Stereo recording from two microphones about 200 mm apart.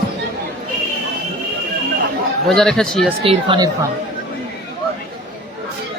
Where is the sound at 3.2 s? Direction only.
25° right (ahead or behind).